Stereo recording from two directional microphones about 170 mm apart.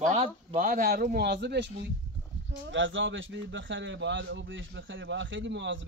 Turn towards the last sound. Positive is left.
turn(degrees=-90)